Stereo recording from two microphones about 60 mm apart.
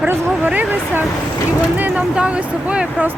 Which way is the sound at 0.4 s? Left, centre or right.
Right.